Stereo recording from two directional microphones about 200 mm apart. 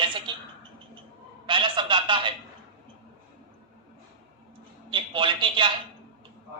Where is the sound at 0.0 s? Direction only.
25° right (ahead or behind).